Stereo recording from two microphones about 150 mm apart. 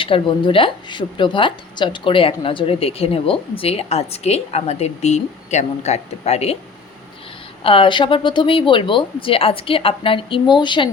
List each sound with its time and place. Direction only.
0.0 s a woman's voice: 35° left (ahead or behind)
7.6 s a woman's voice: 35° left (ahead or behind)